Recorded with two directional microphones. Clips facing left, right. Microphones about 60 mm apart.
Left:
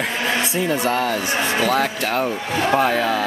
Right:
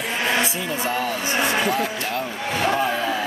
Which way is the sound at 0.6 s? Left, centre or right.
Left.